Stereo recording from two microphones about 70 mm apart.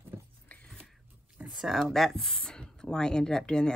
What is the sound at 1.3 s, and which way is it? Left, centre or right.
Speech, centre.